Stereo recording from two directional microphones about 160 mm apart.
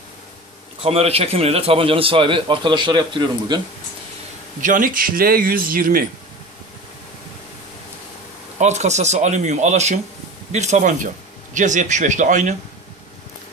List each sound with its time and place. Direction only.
0.8 s a man's voice: 40° right (ahead or behind)
4.6 s speech: 55° right (ahead or behind)
8.5 s speech: 45° right (ahead or behind)